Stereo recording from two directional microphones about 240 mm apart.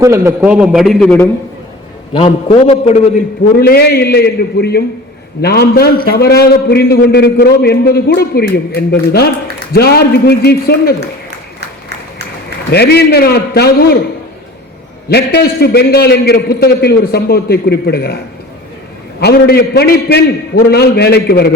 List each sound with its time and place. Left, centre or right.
0.0 s a man's voice: centre
2.1 s a man's voice: left
3.6 s a man's voice: left
12.7 s a man's voice: left
15.1 s a man's voice: left
19.2 s a man's voice: left